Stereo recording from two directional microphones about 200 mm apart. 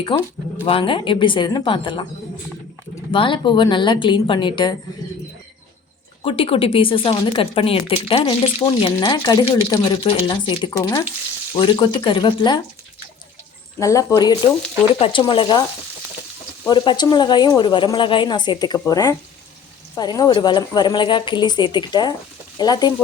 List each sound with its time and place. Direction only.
0.1 s speech: 25° left (ahead or behind)
3.1 s speech: 25° left (ahead or behind)
6.2 s speech: 25° left (ahead or behind)
13.7 s speech: 15° left (ahead or behind)
16.6 s speech: 25° left (ahead or behind)